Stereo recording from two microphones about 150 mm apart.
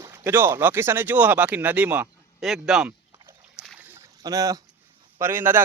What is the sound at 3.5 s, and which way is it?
Boat, 5° right (ahead or behind).